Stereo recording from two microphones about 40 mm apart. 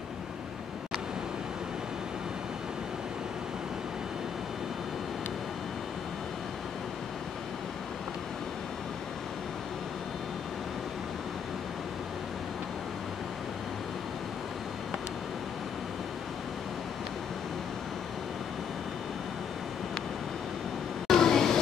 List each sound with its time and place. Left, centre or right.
21.1 s train: centre